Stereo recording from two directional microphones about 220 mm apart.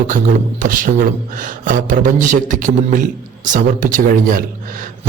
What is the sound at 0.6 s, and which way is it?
Speech, 35° right (ahead or behind).